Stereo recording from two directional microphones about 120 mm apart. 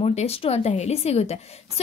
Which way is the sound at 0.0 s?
60° left (ahead or behind).